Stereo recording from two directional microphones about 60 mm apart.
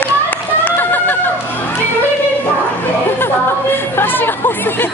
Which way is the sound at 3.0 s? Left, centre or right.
Left.